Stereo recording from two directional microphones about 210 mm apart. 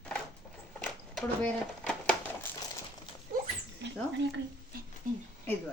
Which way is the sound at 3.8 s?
55° right (ahead or behind).